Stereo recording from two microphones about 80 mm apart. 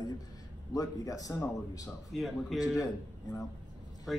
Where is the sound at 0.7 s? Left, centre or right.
Left.